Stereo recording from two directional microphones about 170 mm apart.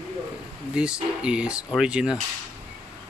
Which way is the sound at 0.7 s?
5° right (ahead or behind).